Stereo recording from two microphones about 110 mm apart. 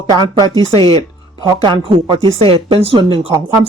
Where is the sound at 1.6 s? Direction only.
45° right (ahead or behind).